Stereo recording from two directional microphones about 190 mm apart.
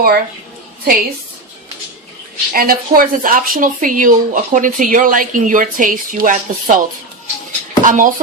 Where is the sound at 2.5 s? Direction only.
50° right (ahead or behind).